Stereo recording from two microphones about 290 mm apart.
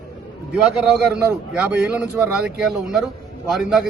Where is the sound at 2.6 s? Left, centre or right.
Centre.